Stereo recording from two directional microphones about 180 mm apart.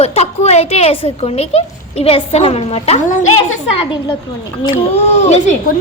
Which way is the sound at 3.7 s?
30° left (ahead or behind).